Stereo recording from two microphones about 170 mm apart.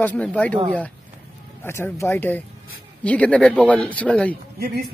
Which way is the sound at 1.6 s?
15° left (ahead or behind).